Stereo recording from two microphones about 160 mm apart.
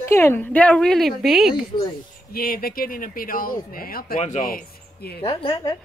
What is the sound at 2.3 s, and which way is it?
Speech, 65° left (ahead or behind).